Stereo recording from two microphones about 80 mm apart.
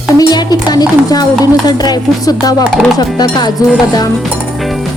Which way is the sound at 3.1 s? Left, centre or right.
Left.